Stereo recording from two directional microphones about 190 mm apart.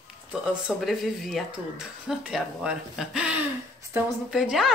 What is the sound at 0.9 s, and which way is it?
Speech, centre (ahead or behind).